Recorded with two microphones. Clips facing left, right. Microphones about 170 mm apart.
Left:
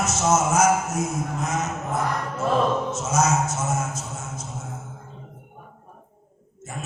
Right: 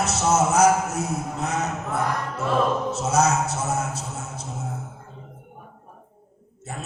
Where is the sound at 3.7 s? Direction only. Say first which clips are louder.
Right 1 dB; 35° right (ahead or behind).